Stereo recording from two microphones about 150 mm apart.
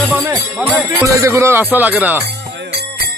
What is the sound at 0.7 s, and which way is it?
Jingle bell, 10° right (ahead or behind).